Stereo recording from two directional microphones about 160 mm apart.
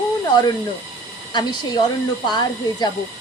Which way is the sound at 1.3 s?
25° left (ahead or behind).